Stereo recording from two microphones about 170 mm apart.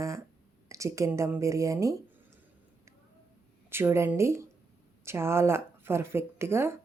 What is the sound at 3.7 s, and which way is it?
Speech, 15° right (ahead or behind).